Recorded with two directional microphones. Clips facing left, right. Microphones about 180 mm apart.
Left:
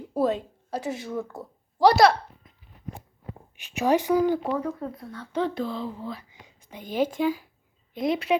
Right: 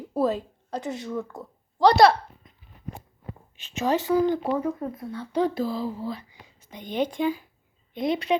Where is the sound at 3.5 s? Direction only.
10° left (ahead or behind).